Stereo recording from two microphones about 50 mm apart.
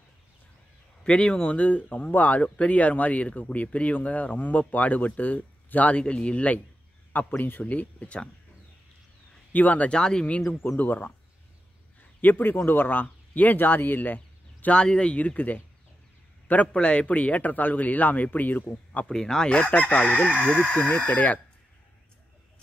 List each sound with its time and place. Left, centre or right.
1.0 s speech: left
9.5 s speech: left
9.8 s speech: centre
10.8 s a man's voice: left
14.7 s speech: centre
16.7 s speech: left
19.0 s speech: centre
19.5 s speech: left